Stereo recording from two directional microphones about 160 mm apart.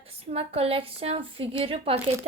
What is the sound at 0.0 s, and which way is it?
Child singing, 40° right (ahead or behind).